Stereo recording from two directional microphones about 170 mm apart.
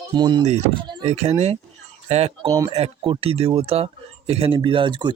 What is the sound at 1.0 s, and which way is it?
Speech, 40° right (ahead or behind).